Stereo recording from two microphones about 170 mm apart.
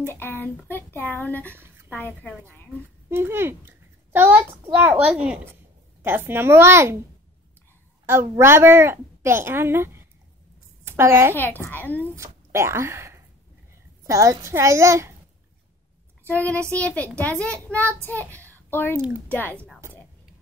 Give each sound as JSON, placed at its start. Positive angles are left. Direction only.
{"t": 0.1, "sound": "speech", "side_deg": 10}
{"t": 3.1, "sound": "a child's voice", "side_deg": -15}
{"t": 8.1, "sound": "a woman's voice", "side_deg": -15}
{"t": 11.3, "sound": "speech", "side_deg": 10}
{"t": 12.0, "sound": "a woman's voice", "side_deg": -15}
{"t": 16.3, "sound": "a child's voice", "side_deg": 10}